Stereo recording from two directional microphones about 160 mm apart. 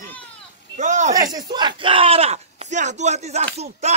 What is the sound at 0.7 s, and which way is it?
Speech, 50° right (ahead or behind).